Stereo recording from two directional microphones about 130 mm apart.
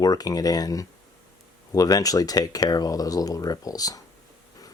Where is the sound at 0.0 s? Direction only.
30° left (ahead or behind).